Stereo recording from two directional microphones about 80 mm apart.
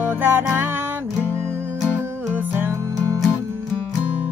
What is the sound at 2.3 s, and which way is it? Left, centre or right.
Music, right.